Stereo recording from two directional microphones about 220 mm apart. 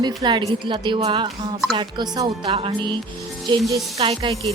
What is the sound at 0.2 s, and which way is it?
Speech, 20° right (ahead or behind).